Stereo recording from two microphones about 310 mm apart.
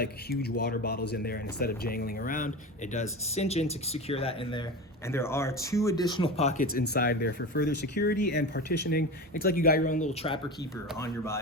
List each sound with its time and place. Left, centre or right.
0.0 s speech: left
10.9 s speech: centre